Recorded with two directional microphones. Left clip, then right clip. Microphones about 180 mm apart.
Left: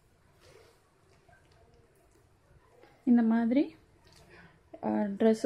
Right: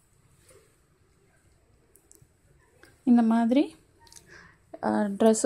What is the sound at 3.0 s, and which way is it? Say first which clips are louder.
Speech: right 4 dB; 20° right (ahead or behind).